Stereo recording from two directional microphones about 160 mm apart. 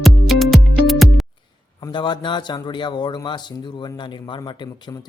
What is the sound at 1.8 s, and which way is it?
A man's voice, 30° left (ahead or behind).